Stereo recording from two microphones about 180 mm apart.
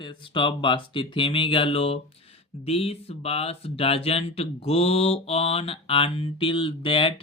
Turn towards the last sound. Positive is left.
turn(degrees=30)  # may be behind; listen again after turning